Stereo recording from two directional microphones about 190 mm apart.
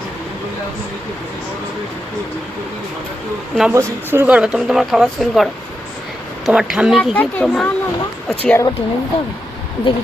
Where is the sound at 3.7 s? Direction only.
10° right (ahead or behind).